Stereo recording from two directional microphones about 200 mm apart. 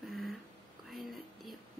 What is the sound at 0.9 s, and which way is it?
Whispering, centre (ahead or behind).